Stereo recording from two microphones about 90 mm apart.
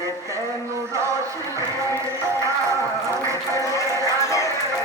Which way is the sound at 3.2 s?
35° right (ahead or behind).